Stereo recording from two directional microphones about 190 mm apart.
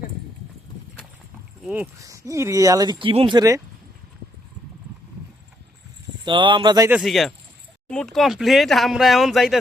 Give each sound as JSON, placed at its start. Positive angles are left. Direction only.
{"t": 1.6, "sound": "speech", "side_deg": -10}
{"t": 6.2, "sound": "speech", "side_deg": -25}
{"t": 6.9, "sound": "speech", "side_deg": 0}